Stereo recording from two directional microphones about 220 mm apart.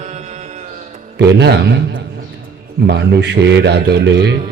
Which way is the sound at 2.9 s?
50° right (ahead or behind).